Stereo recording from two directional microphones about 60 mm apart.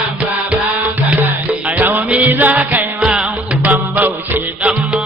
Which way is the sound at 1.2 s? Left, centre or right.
Right.